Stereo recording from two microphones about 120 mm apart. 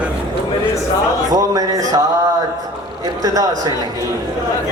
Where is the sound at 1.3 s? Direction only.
30° right (ahead or behind).